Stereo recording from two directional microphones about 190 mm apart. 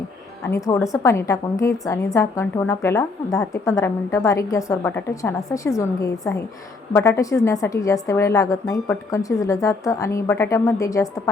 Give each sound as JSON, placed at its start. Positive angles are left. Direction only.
{"t": 0.4, "sound": "a woman's voice", "side_deg": 15}